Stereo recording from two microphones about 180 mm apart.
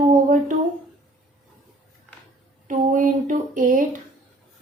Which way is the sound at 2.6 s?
45° right (ahead or behind).